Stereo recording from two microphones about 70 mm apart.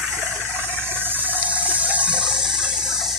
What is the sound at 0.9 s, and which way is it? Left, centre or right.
Water, right.